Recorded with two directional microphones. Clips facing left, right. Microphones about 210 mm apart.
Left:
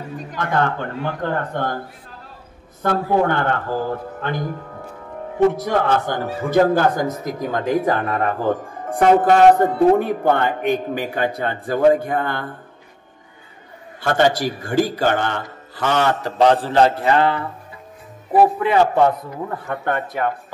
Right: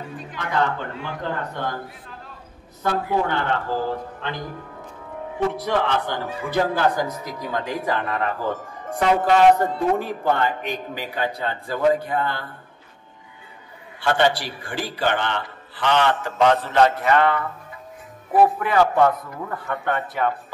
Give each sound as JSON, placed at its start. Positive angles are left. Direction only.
{"t": 0.2, "sound": "speech", "side_deg": 45}
{"t": 2.8, "sound": "speech", "side_deg": 55}
{"t": 5.5, "sound": "speech", "side_deg": 45}
{"t": 14.0, "sound": "a man's voice", "side_deg": 45}
{"t": 19.8, "sound": "speech", "side_deg": 45}